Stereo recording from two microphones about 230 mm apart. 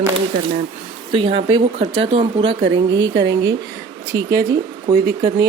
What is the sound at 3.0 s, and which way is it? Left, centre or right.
Speech, right.